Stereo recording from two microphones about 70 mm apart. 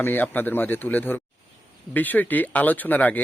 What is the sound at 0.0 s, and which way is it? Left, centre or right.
A man's voice, left.